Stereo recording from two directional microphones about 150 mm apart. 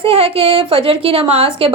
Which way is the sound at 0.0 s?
40° right (ahead or behind).